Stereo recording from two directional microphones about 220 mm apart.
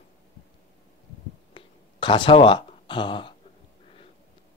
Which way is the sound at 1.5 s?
20° left (ahead or behind).